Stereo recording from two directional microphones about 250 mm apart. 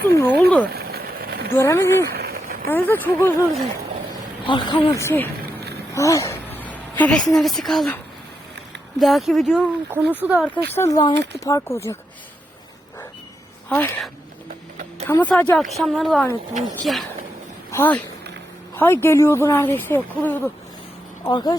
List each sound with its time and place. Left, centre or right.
0.2 s speech: centre
0.7 s a sound: right
1.5 s speech: centre
2.1 s a sound: right
2.6 s speech: centre
4.4 s a woman's voice: centre
10.7 s speech: centre
13.7 s speech: centre